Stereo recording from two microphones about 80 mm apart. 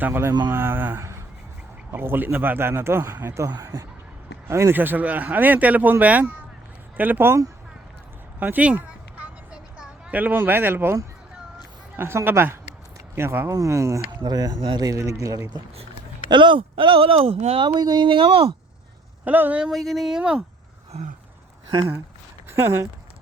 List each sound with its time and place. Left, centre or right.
0.0 s speech: right
3.5 s speech: right
4.4 s speech: right
8.4 s a sound: centre
11.9 s speech: right
13.5 s speech: right
14.2 s speech: right
14.8 s speech: right
16.3 s speech: right
17.6 s speech: right
19.2 s speech: right
19.7 s speech: centre
21.7 s speech: right
22.4 s speech: right